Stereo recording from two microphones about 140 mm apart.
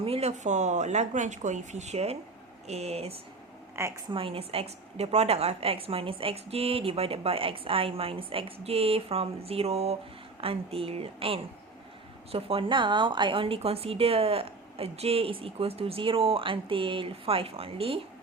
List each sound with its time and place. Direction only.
0.0 s a woman's voice: 45° right (ahead or behind)
3.8 s a woman's voice: 20° right (ahead or behind)
4.1 s a woman's voice: 40° right (ahead or behind)